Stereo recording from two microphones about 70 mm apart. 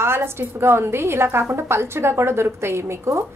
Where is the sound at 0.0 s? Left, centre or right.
Right.